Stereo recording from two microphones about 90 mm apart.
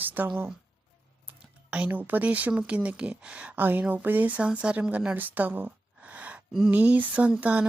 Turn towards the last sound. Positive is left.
turn(degrees=-15)  # may be behind; listen again after turning